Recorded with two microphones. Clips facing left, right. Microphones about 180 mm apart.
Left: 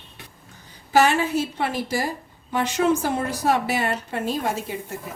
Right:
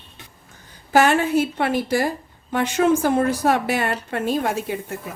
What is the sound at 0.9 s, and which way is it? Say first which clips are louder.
A woman's voice: right 2 dB; 55° right (ahead or behind).